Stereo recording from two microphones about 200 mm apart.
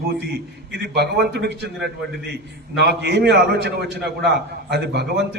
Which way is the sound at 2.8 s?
60° right (ahead or behind).